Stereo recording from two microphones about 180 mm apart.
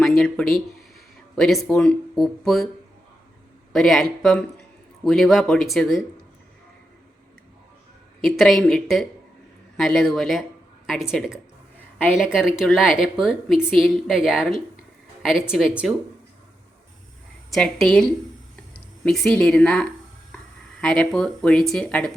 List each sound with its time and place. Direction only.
0.0 s speech: 5° left (ahead or behind)
3.7 s speech: centre (ahead or behind)
8.2 s speech: centre (ahead or behind)
17.5 s speech: centre (ahead or behind)